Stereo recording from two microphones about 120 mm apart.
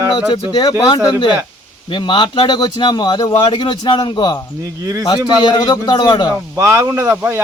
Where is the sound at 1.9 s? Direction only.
40° left (ahead or behind).